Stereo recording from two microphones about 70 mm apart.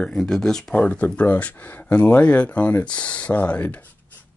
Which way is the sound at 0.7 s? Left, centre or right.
Left.